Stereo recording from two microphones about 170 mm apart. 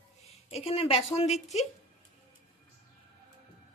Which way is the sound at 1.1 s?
40° left (ahead or behind).